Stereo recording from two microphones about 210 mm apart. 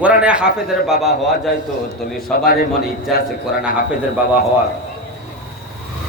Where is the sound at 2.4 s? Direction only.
45° left (ahead or behind).